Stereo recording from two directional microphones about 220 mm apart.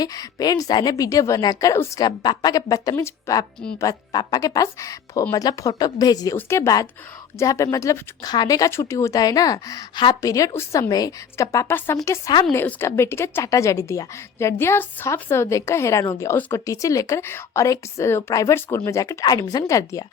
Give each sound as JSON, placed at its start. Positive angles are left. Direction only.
{"t": 0.0, "sound": "a woman's voice", "side_deg": 15}